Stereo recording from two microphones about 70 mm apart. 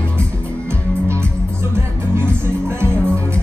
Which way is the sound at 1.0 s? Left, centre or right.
Right.